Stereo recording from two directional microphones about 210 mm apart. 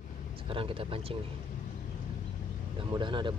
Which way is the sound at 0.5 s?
25° right (ahead or behind).